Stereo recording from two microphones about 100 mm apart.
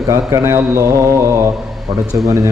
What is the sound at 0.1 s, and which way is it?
Speech, 25° right (ahead or behind).